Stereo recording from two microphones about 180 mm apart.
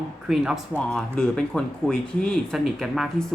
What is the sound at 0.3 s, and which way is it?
Speech, centre (ahead or behind).